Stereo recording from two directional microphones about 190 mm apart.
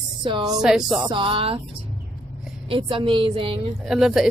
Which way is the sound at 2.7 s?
25° right (ahead or behind).